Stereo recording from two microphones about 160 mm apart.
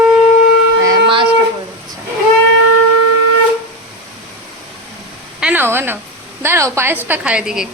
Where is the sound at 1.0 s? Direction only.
30° right (ahead or behind).